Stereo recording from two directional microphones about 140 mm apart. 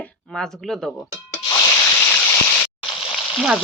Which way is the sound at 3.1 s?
Centre (ahead or behind).